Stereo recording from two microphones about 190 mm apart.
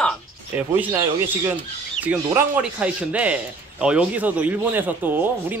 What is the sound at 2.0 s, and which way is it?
A man's voice, 10° right (ahead or behind).